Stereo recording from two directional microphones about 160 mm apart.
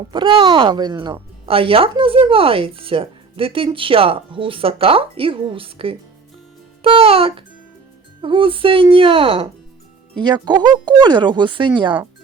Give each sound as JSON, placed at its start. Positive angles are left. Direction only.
{"t": 0.1, "sound": "speech", "side_deg": -30}